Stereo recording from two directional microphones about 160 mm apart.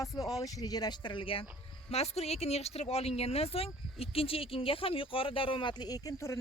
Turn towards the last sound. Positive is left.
turn(degrees=20)  # may be behind; listen again after turning